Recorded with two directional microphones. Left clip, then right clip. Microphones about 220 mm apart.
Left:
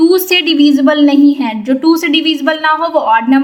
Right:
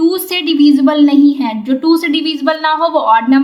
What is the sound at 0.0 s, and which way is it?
A woman's voice, 15° left (ahead or behind).